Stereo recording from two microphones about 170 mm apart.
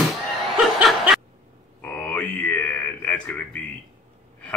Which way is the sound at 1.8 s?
10° left (ahead or behind).